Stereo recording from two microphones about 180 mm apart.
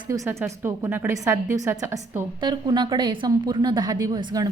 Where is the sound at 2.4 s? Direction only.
25° right (ahead or behind).